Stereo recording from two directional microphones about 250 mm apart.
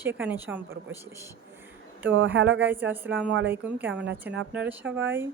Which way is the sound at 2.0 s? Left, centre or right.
Right.